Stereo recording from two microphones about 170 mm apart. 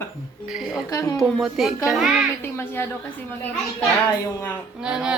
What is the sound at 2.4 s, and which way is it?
Speech, 10° left (ahead or behind).